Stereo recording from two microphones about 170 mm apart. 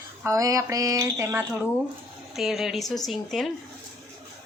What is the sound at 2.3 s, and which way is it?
Speech, centre (ahead or behind).